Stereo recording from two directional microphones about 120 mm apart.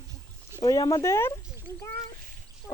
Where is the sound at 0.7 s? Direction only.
30° left (ahead or behind).